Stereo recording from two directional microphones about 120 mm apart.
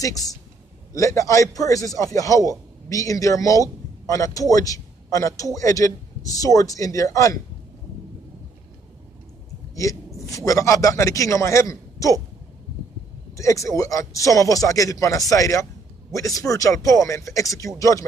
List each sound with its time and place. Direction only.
0.0 s speech: 30° left (ahead or behind)
9.8 s a man's voice: 25° left (ahead or behind)
13.4 s speech: 25° left (ahead or behind)